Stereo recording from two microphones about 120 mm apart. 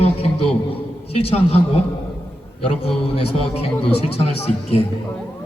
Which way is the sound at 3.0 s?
55° left (ahead or behind).